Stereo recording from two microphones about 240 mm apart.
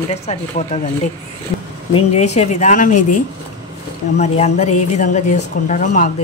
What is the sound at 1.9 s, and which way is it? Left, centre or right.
Speech, left.